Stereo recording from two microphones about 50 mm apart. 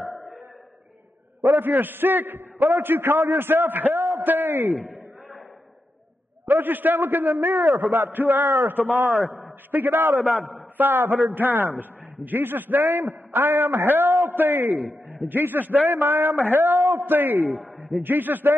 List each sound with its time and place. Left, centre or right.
1.4 s a man's voice: right
3.9 s a sound: right
4.2 s a man's voice: right
6.4 s a man's voice: right
9.1 s a man's voice: centre
9.7 s a man's voice: right
10.1 s a man's voice: centre
10.4 s a man's voice: right
15.9 s a man's voice: right